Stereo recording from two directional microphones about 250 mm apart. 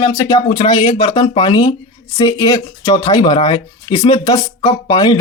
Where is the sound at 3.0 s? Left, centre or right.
Centre.